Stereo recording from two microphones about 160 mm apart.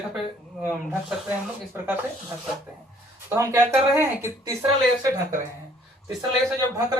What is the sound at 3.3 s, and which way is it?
Speech, 20° right (ahead or behind).